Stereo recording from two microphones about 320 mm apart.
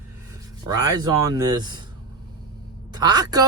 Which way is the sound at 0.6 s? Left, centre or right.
Centre.